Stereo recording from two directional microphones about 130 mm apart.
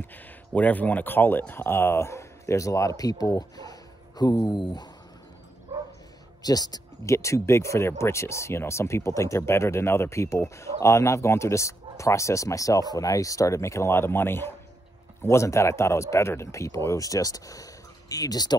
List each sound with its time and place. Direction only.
0.6 s speech: 10° left (ahead or behind); by 4.8 s 35° left (ahead or behind)
6.4 s speech: 30° left (ahead or behind)